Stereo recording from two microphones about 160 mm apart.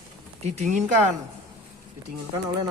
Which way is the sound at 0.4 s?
45° right (ahead or behind).